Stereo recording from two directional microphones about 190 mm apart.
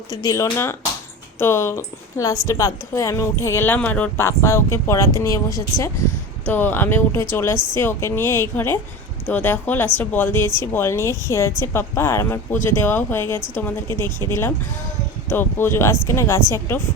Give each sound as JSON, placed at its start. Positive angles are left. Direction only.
{"t": 0.1, "sound": "a woman's voice", "side_deg": 20}